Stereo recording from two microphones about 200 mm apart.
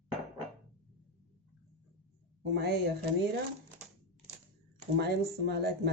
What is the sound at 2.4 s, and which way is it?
Speech, 55° right (ahead or behind).